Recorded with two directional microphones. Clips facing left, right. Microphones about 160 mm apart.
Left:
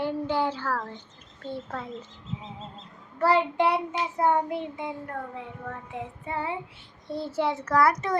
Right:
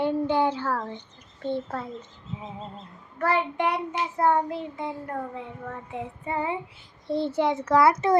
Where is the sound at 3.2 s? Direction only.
35° left (ahead or behind).